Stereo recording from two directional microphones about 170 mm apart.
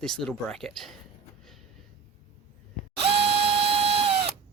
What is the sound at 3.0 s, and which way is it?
Drill, 35° right (ahead or behind).